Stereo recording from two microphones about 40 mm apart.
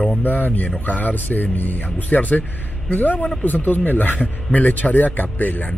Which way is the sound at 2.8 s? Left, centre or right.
Left.